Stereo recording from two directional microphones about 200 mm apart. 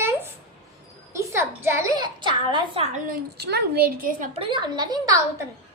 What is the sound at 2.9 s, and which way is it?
A child's voice, 50° right (ahead or behind).